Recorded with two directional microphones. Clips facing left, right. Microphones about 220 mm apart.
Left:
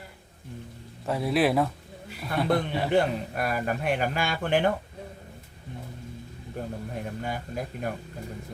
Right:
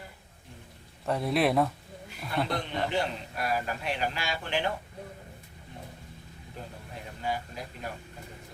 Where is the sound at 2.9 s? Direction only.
55° left (ahead or behind).